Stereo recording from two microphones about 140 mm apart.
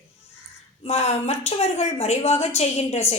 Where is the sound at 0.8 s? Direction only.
50° left (ahead or behind).